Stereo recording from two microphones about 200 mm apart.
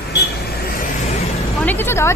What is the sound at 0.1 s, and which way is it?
Vehicle, 50° left (ahead or behind).